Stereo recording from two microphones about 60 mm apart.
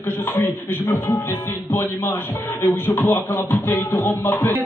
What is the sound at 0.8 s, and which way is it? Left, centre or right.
Beatboxing, left.